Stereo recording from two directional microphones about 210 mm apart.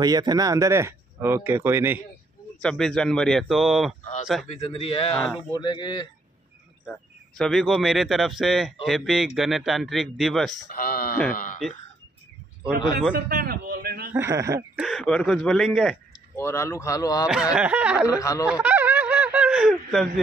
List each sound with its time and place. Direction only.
0.0 s speech: 20° right (ahead or behind)
2.6 s speech: 5° left (ahead or behind)
4.5 s a man's voice: 30° left (ahead or behind)
5.1 s speech: centre (ahead or behind)
5.5 s a man's voice: 20° left (ahead or behind)
6.9 s speech: centre (ahead or behind)
10.7 s speech: 45° left (ahead or behind)
13.1 s a sound: 45° right (ahead or behind)
14.1 s speech: 15° right (ahead or behind)
14.8 s speech: centre (ahead or behind)
16.3 s speech: 10° left (ahead or behind)
17.3 s speech: 5° right (ahead or behind)
18.2 s speech: 15° left (ahead or behind)
18.5 s a sound: 10° right (ahead or behind)